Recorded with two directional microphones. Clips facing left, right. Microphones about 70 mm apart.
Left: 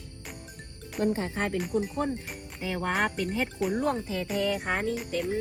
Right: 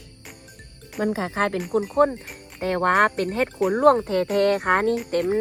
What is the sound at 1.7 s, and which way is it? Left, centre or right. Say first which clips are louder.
Speech: right 9 dB; right.